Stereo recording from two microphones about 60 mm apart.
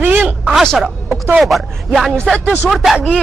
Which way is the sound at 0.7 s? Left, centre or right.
Centre.